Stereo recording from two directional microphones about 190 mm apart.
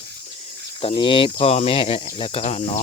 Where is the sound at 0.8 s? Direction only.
30° left (ahead or behind).